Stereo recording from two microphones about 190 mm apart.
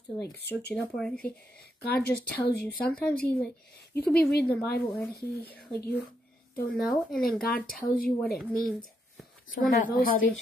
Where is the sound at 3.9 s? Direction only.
55° left (ahead or behind).